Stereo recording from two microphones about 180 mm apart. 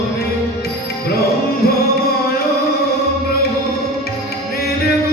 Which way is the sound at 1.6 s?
60° left (ahead or behind).